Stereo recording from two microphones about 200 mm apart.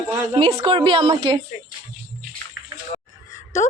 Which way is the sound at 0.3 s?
25° right (ahead or behind).